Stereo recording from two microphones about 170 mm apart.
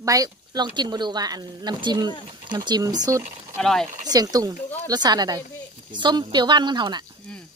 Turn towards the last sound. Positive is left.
turn(degrees=-25)  # may be behind; listen again after turning